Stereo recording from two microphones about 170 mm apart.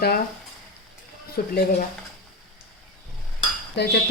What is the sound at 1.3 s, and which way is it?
Speech, 65° left (ahead or behind).